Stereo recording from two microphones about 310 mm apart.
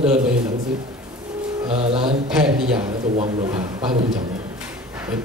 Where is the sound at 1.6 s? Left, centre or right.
Centre.